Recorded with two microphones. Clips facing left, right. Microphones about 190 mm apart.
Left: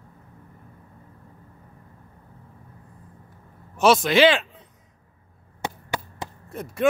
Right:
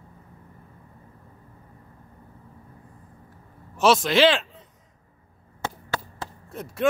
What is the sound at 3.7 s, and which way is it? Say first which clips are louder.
Speech: left 2 dB; centre (ahead or behind).